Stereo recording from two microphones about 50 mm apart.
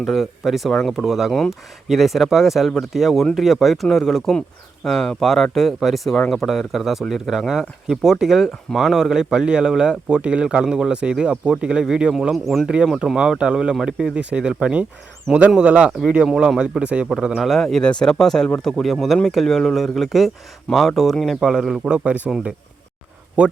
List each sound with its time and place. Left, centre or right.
0.0 s speech: centre
12.3 s speech: centre; by 17.1 s right
17.2 s speech: centre
17.5 s speech: centre
21.8 s speech: right